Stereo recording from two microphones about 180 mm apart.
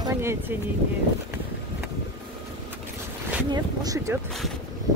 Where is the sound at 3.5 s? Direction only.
20° right (ahead or behind).